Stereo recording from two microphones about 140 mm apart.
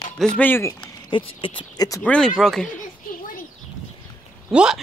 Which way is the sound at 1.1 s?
40° left (ahead or behind).